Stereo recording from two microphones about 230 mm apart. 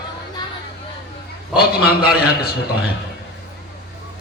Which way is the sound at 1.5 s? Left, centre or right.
Left.